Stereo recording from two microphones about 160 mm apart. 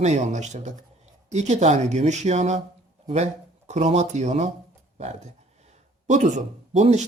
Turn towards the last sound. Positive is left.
turn(degrees=-45)  # may be behind; listen again after turning